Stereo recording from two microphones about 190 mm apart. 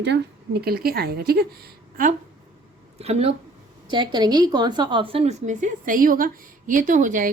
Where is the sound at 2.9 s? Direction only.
30° right (ahead or behind).